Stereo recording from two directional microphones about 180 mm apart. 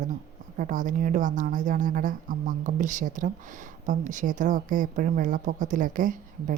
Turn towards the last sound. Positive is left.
turn(degrees=-45)  # may be behind; listen again after turning